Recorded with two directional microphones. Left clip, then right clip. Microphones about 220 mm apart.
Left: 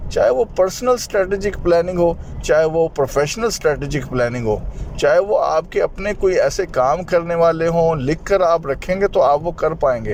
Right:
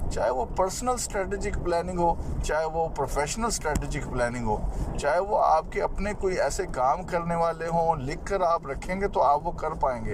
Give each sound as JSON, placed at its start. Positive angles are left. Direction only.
{"t": 0.1, "sound": "speech", "side_deg": 45}